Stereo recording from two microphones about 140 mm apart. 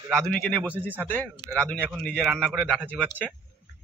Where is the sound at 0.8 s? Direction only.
15° right (ahead or behind).